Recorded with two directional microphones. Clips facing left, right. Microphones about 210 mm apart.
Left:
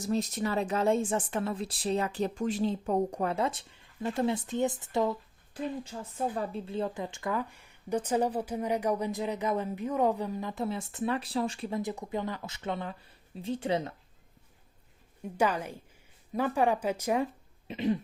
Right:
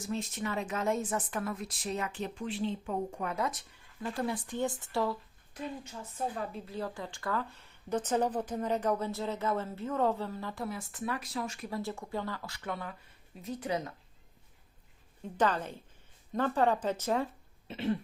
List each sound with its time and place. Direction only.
0.0 s a woman's voice: 40° left (ahead or behind); by 5.1 s 20° left (ahead or behind)
5.5 s a woman's voice: 30° left (ahead or behind)
11.8 s speech: 20° left (ahead or behind)
15.2 s speech: 10° left (ahead or behind)
17.7 s cough: 15° left (ahead or behind)